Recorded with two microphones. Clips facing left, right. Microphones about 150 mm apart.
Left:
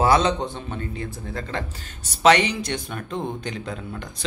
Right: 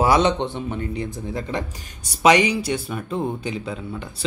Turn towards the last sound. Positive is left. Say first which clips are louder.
# right 3 dB
turn(degrees=-5)  # may be behind; listen again after turning